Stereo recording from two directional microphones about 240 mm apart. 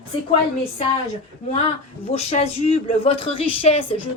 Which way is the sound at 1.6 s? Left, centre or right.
Left.